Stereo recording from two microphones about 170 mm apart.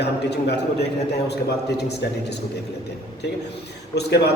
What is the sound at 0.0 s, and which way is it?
Speech, 80° left.